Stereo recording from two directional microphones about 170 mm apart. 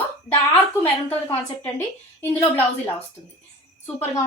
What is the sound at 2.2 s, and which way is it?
Speech, 10° left (ahead or behind).